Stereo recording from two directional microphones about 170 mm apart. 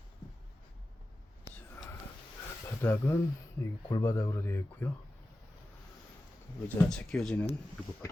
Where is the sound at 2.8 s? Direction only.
15° left (ahead or behind).